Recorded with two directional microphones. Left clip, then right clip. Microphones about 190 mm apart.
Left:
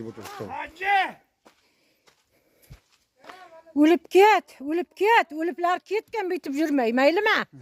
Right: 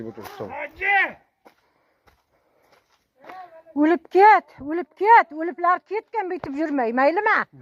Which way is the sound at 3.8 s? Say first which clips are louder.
Right 1 dB; 35° left (ahead or behind).